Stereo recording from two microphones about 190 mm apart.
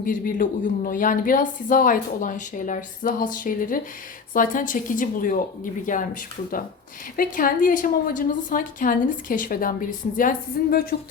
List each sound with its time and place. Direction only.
0.0 s speech: 45° left (ahead or behind)
7.2 s speech: 45° left (ahead or behind)